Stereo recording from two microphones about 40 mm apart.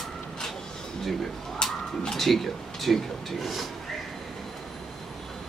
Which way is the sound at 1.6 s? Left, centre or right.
Centre.